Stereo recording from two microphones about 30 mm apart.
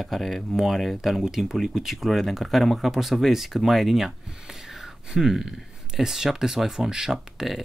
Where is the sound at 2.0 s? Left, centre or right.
Centre.